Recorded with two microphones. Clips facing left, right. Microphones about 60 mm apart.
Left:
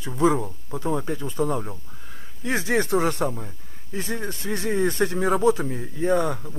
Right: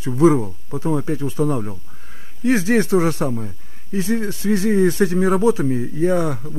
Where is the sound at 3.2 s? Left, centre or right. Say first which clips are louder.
Right 4 dB; centre.